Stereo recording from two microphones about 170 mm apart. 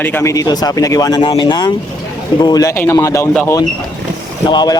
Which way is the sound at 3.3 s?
5° left (ahead or behind).